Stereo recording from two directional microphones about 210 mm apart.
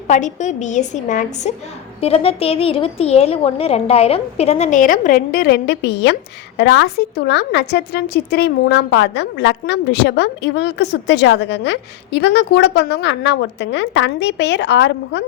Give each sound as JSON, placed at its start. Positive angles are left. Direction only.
{"t": 0.1, "sound": "a woman's voice", "side_deg": 35}